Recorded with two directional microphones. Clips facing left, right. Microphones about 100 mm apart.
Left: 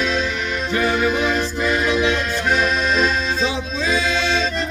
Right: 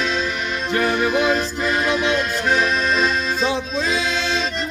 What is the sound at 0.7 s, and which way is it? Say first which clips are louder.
Music: even; 45° right (ahead or behind).